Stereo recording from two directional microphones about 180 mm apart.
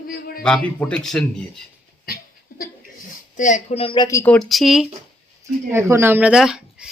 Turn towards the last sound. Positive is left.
turn(degrees=-5)  # may be behind; listen again after turning